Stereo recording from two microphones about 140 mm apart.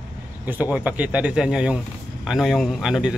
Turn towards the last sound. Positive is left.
turn(degrees=0)  # may be behind; listen again after turning